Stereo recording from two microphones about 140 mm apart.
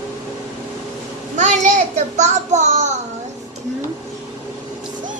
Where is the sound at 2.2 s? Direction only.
55° right (ahead or behind).